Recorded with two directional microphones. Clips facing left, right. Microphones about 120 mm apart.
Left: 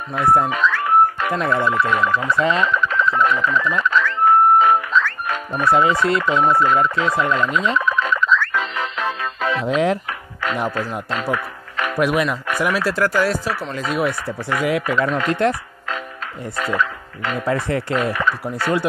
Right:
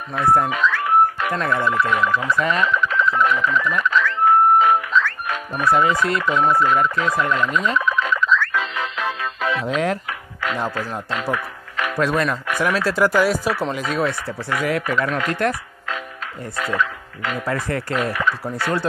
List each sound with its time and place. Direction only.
0.1 s speech: 20° left (ahead or behind)
0.5 s music: 35° left (ahead or behind)
1.5 s speech: 30° left (ahead or behind)
7.8 s music: 35° left (ahead or behind)
9.7 s speech: 20° left (ahead or behind)
11.3 s music: 35° left (ahead or behind)
12.0 s speech: 10° left (ahead or behind)
13.0 s speech: 10° right (ahead or behind)
13.8 s speech: 10° left (ahead or behind)
16.5 s speech: 35° left (ahead or behind)
17.5 s speech: 25° left (ahead or behind)